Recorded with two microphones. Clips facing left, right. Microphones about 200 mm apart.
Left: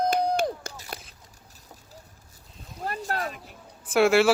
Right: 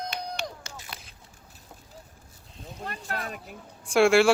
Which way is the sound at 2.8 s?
40° left (ahead or behind).